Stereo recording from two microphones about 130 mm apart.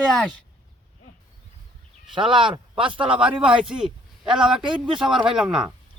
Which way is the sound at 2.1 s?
40° right (ahead or behind).